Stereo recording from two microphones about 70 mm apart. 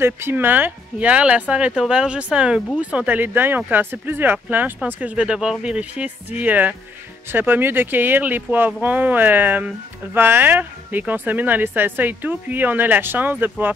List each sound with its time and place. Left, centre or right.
0.0 s speech: right